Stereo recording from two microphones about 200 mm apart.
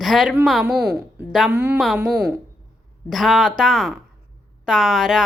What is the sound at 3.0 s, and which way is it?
A woman's voice, centre (ahead or behind).